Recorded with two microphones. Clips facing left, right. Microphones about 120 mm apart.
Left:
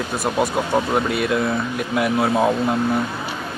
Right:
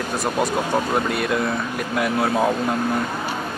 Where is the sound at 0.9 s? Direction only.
Centre (ahead or behind).